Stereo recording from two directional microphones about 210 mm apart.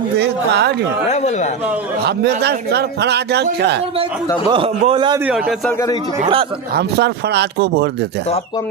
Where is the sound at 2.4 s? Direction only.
50° right (ahead or behind).